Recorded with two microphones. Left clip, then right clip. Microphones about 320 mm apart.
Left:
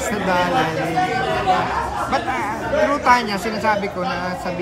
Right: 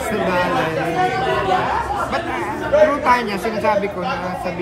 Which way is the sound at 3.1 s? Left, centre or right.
Centre.